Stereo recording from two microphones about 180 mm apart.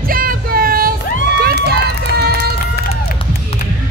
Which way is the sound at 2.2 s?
65° right (ahead or behind).